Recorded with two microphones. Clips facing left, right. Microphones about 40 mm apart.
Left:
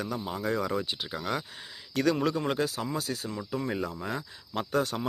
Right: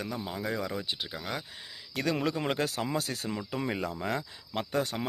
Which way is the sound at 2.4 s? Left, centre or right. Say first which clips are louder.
Left 1 dB; right.